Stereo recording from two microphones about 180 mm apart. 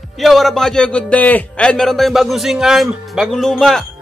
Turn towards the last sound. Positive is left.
turn(degrees=0)  # may be behind; listen again after turning